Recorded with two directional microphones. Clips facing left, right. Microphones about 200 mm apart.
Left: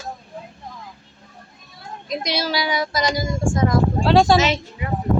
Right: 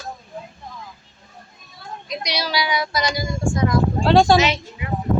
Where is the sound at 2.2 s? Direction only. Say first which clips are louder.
Left 1 dB; 50° left (ahead or behind).